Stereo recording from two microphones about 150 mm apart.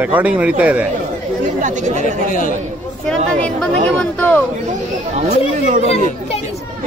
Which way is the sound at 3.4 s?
5° left (ahead or behind).